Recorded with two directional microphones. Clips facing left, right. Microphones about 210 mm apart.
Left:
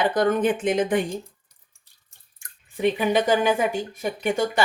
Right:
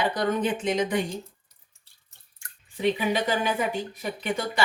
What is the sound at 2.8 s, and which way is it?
Speech, 50° left (ahead or behind).